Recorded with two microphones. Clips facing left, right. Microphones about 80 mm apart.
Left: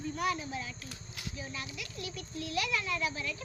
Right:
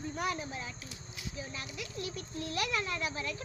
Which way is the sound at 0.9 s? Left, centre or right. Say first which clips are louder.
Left 1 dB; left.